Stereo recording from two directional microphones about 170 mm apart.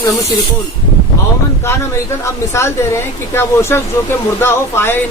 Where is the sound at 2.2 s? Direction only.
15° left (ahead or behind).